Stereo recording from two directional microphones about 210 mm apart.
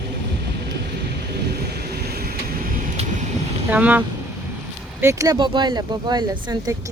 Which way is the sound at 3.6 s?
10° right (ahead or behind).